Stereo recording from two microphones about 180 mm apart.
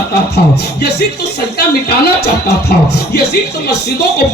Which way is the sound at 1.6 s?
65° left (ahead or behind).